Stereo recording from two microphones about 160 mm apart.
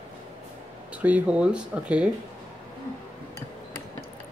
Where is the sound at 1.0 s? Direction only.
10° right (ahead or behind).